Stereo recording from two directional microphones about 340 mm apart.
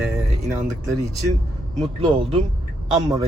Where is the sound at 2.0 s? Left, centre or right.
Centre.